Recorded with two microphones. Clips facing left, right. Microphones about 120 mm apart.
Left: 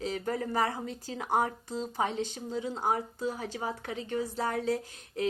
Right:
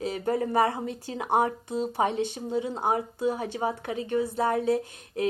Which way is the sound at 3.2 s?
60° right (ahead or behind).